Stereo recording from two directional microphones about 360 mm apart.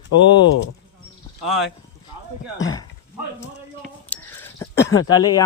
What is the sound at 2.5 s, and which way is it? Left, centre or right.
Speech, centre.